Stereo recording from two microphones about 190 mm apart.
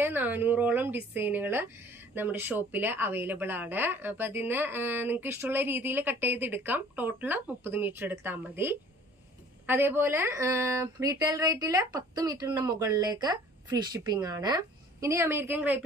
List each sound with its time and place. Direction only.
0.0 s speech: 10° right (ahead or behind)